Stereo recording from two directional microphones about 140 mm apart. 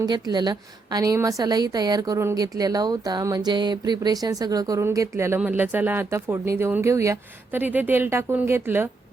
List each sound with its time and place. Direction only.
0.0 s a woman's voice: 30° right (ahead or behind)